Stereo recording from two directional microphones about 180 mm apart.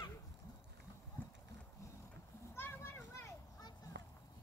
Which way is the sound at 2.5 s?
10° left (ahead or behind).